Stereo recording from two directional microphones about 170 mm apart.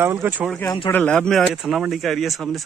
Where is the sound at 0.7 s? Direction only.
25° left (ahead or behind).